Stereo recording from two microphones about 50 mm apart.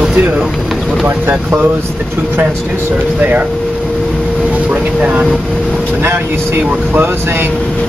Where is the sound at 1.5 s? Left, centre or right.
Right.